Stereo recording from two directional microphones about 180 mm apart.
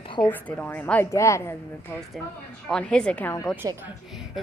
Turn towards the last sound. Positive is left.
turn(degrees=10)  # may be behind; listen again after turning